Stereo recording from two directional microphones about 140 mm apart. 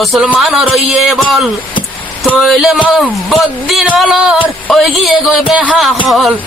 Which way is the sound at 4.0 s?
5° right (ahead or behind).